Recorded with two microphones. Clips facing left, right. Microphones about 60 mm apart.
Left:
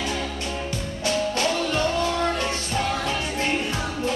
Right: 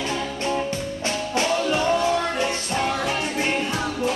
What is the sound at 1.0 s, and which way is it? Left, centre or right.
Music, right.